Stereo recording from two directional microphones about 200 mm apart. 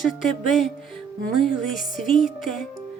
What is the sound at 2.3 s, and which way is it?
Music, 45° left (ahead or behind).